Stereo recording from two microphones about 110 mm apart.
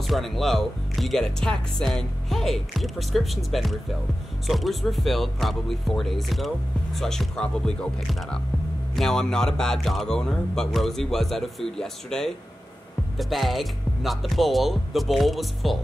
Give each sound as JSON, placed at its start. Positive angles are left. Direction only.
{"t": 0.0, "sound": "speech", "side_deg": 0}